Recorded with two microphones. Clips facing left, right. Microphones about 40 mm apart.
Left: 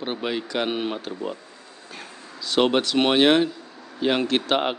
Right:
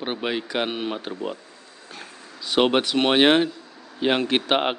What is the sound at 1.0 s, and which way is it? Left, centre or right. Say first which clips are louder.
Speech: even; centre.